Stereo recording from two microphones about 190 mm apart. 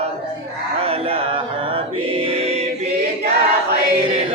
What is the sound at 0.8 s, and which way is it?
Choir, 30° right (ahead or behind).